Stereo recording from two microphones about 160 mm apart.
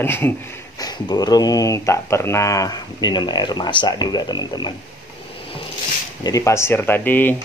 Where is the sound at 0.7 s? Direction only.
25° left (ahead or behind).